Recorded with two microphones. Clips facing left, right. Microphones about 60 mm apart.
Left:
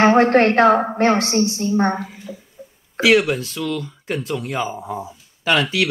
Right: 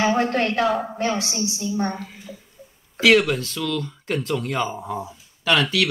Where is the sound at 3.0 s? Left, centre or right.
Centre.